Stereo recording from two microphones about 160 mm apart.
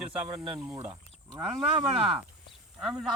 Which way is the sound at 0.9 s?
30° right (ahead or behind).